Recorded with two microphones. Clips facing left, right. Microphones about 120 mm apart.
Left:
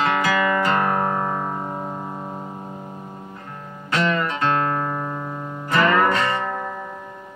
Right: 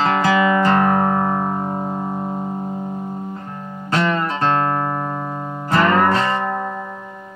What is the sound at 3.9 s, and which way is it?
Music, 30° right (ahead or behind).